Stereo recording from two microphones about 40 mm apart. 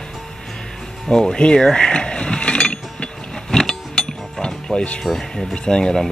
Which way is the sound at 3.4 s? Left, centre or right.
Centre.